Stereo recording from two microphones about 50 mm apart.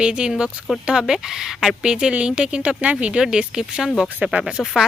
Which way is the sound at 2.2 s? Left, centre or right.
Centre.